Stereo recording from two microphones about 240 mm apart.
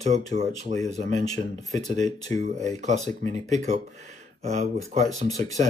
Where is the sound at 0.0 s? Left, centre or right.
Right.